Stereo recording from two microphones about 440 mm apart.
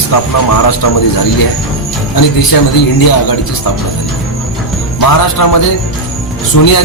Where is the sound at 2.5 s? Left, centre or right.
Left.